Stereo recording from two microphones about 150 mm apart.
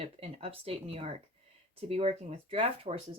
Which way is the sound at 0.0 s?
40° right (ahead or behind).